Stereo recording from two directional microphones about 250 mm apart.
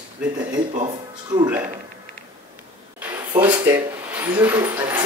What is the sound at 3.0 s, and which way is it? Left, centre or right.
Speech, centre.